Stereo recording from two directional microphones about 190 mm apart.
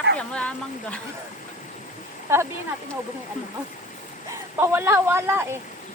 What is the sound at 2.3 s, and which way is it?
Speech, 15° right (ahead or behind).